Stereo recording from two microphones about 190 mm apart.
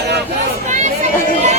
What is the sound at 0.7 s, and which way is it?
Chatter, 40° right (ahead or behind).